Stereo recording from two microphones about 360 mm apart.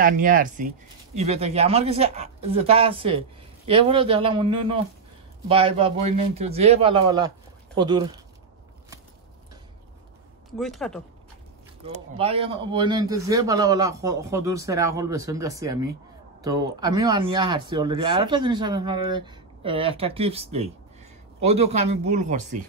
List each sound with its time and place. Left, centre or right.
0.0 s speech: right
10.6 s speech: centre
11.9 s speech: centre